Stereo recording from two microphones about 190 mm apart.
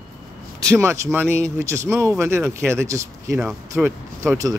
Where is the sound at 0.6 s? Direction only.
15° right (ahead or behind).